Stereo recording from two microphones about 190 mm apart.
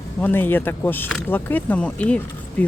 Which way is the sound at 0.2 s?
10° left (ahead or behind).